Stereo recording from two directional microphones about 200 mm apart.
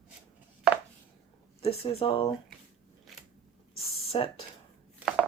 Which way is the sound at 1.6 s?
30° left (ahead or behind).